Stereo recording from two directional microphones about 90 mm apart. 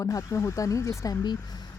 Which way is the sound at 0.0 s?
35° left (ahead or behind).